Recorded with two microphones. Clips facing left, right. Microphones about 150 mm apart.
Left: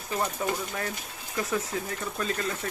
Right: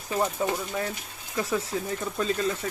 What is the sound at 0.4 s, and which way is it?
Speech, 20° right (ahead or behind).